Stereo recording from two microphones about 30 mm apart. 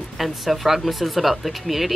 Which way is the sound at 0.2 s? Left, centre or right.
Centre.